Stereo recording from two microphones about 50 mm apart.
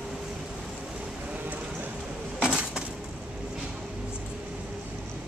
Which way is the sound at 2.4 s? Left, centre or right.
Centre.